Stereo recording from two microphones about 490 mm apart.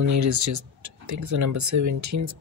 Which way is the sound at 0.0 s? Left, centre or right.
Right.